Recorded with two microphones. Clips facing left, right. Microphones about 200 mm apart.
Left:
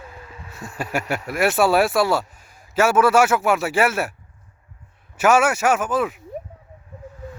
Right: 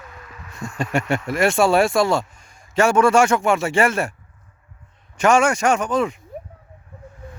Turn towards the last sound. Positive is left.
turn(degrees=5)  # may be behind; listen again after turning